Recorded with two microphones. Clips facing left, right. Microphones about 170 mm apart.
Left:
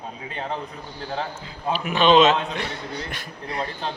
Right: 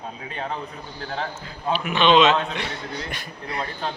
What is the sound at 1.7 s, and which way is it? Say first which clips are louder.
A man's voice: left 1 dB; 40° left (ahead or behind).